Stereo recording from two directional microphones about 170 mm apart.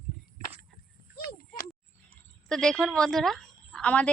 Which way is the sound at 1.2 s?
55° left (ahead or behind).